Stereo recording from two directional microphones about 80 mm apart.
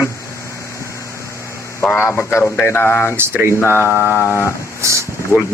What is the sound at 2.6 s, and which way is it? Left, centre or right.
Mantra, left.